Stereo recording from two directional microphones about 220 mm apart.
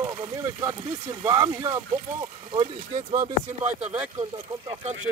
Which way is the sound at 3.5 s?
30° right (ahead or behind).